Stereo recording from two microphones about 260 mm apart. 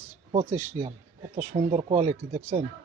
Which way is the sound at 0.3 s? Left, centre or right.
Right.